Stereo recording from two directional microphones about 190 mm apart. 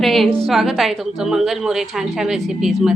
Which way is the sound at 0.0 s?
Centre (ahead or behind).